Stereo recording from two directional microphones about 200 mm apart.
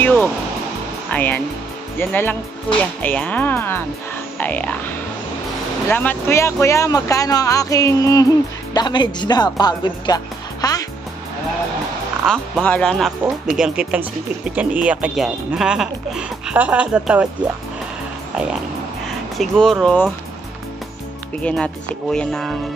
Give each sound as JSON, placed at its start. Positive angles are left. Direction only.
{"t": 0.0, "sound": "music", "side_deg": 10}
{"t": 1.1, "sound": "speech", "side_deg": 10}
{"t": 5.9, "sound": "speech", "side_deg": 10}
{"t": 12.3, "sound": "speech", "side_deg": 5}
{"t": 19.3, "sound": "speech", "side_deg": 0}
{"t": 21.4, "sound": "speech", "side_deg": 5}